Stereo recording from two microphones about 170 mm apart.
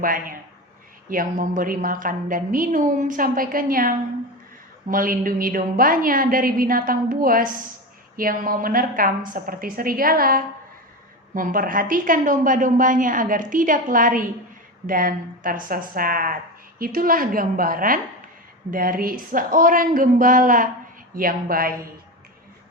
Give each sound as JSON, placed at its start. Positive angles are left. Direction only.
{"t": 0.0, "sound": "a woman's voice", "side_deg": -55}